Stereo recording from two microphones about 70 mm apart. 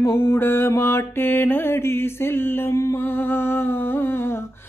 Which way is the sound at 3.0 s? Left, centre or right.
Left.